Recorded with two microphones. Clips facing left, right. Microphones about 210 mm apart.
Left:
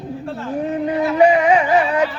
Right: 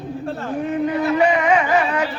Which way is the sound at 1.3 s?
35° left (ahead or behind).